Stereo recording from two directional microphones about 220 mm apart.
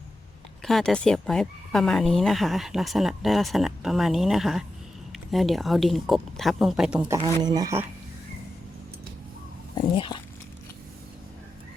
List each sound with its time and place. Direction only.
0.6 s speech: centre (ahead or behind)
7.2 s speech: 15° right (ahead or behind)
9.7 s speech: 20° left (ahead or behind)